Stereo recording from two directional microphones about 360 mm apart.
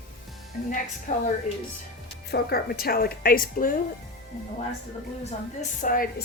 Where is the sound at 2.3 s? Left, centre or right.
Left.